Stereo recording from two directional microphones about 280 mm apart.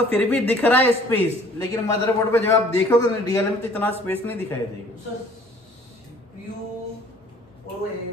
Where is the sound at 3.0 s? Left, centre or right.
Centre.